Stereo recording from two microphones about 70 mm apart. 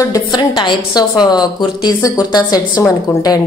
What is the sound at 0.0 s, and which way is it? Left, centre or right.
A woman's voice, left.